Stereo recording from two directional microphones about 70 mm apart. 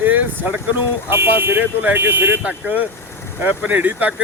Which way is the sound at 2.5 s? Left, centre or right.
Centre.